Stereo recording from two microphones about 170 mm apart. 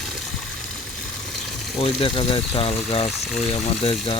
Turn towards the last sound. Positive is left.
turn(degrees=35)  # may be behind; listen again after turning